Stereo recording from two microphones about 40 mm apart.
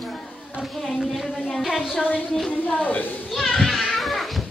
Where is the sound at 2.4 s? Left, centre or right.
Left.